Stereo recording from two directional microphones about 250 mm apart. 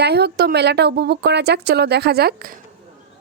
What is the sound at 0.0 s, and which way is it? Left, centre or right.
A woman's voice, right.